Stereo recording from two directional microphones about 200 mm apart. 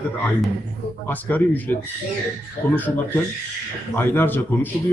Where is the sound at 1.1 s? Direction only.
10° left (ahead or behind).